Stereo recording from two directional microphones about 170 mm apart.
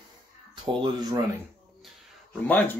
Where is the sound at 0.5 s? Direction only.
25° right (ahead or behind).